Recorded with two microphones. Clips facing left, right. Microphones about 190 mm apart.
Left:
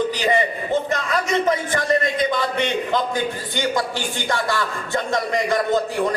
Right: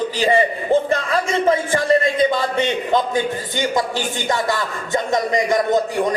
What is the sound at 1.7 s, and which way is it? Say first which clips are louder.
A man's voice: right 4 dB; 25° right (ahead or behind).